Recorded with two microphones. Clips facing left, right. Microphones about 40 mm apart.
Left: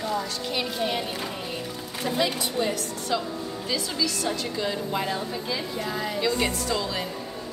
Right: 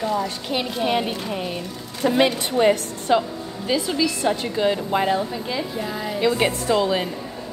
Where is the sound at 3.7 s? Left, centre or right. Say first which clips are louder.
Right 7 dB; right.